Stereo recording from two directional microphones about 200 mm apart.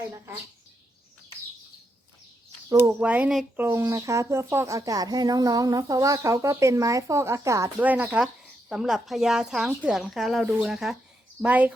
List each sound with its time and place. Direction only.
2.6 s speech: 10° right (ahead or behind)